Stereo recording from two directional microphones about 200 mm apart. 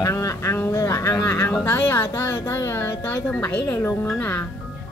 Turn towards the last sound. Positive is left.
turn(degrees=10)  # may be behind; listen again after turning